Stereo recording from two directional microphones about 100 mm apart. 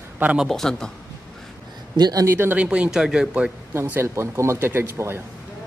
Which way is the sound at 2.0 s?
40° right (ahead or behind).